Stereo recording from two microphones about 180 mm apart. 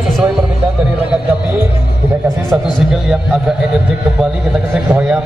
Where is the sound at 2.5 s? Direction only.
5° right (ahead or behind).